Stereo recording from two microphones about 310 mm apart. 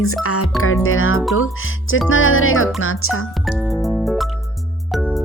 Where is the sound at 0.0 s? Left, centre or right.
Left.